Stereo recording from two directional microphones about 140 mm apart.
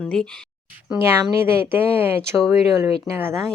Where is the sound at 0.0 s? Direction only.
5° left (ahead or behind).